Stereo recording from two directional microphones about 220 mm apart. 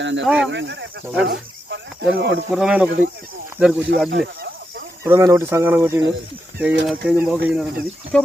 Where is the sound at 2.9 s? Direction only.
40° right (ahead or behind).